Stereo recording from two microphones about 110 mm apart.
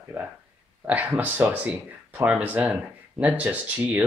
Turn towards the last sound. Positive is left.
turn(degrees=-10)  # may be behind; listen again after turning